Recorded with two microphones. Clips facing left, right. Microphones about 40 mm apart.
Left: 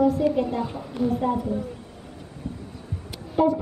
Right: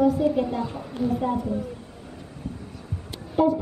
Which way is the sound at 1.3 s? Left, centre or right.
Left.